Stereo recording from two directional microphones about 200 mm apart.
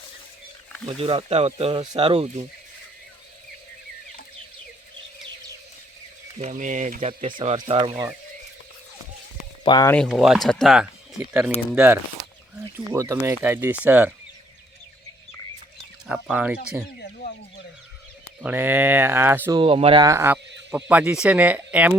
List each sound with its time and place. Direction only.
0.9 s speech: 30° right (ahead or behind)
6.4 s speech: 40° right (ahead or behind)
7.1 s speech: 25° right (ahead or behind)
9.6 s speech: 20° left (ahead or behind)
9.9 s speech: centre (ahead or behind)
16.0 s speech: 5° right (ahead or behind)
18.4 s speech: 10° right (ahead or behind)
19.5 s speech: 25° right (ahead or behind); by 21.9 s 10° right (ahead or behind)